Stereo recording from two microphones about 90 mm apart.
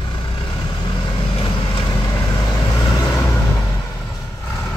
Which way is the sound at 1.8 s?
45° left (ahead or behind).